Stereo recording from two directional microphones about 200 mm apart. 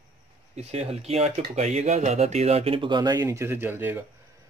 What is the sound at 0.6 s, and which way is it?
Speech, 30° right (ahead or behind).